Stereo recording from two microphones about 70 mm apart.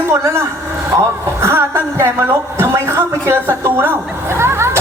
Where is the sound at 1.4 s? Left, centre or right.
Right.